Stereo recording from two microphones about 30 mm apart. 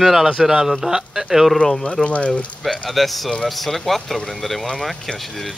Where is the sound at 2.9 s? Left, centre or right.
Centre.